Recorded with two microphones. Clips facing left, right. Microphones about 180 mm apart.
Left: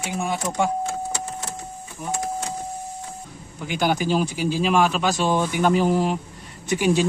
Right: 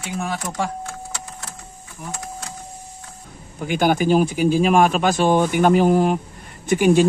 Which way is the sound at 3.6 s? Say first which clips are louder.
Right 4 dB; 50° right (ahead or behind).